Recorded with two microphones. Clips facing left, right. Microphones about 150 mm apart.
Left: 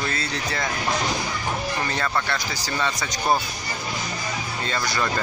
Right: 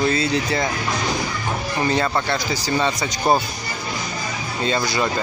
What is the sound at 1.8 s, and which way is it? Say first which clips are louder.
Speech: right 5 dB; 20° right (ahead or behind).